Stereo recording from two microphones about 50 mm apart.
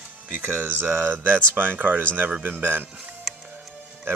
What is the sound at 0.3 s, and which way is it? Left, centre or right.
Speech, right.